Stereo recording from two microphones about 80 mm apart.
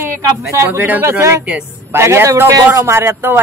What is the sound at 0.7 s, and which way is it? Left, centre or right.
A man's voice, right.